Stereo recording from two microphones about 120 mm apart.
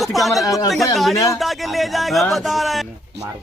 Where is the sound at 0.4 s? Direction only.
30° left (ahead or behind).